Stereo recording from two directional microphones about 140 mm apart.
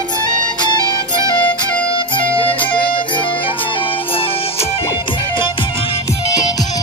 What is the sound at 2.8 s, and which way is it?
Music, 35° left (ahead or behind).